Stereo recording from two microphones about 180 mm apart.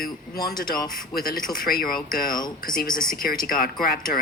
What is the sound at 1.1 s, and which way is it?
Speech, 55° left (ahead or behind).